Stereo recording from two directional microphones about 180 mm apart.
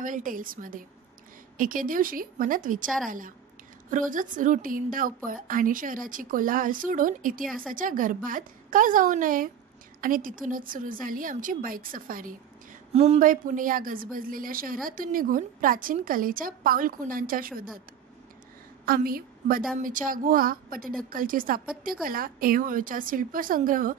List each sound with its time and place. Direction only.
0.0 s speech: 50° right (ahead or behind)
12.9 s speech: 35° right (ahead or behind); by 17.6 s 50° right (ahead or behind)
18.9 s a woman's voice: 55° right (ahead or behind)